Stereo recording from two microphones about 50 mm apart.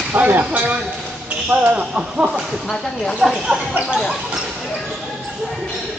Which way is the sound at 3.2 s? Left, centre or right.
Centre.